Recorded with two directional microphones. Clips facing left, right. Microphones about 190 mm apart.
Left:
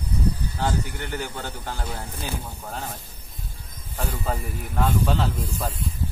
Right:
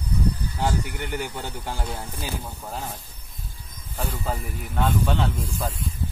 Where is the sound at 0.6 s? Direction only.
15° right (ahead or behind).